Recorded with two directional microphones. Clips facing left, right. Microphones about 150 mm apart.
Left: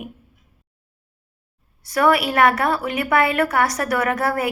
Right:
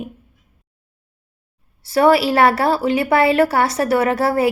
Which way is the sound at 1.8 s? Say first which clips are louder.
Right 4 dB; 30° right (ahead or behind).